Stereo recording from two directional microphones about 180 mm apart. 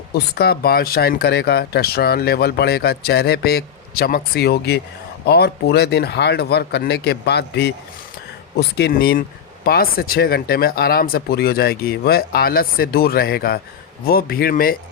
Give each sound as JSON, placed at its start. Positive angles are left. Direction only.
{"t": 0.1, "sound": "speech", "side_deg": 60}